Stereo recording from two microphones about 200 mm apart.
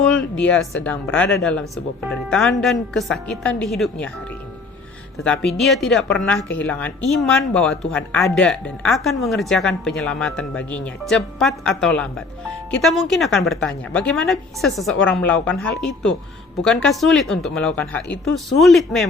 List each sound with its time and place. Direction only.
0.1 s speech: 5° left (ahead or behind)
5.2 s speech: 5° left (ahead or behind)